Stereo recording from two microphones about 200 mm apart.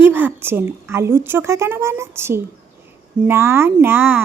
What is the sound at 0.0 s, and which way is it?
Speech, 10° right (ahead or behind).